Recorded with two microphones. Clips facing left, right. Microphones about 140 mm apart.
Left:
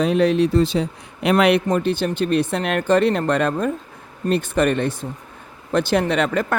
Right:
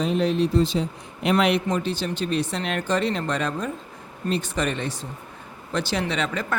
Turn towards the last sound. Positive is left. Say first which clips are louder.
# left 7 dB
turn(degrees=55)  # may be behind; listen again after turning